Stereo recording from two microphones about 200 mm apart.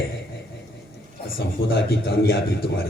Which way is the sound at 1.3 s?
50° left (ahead or behind).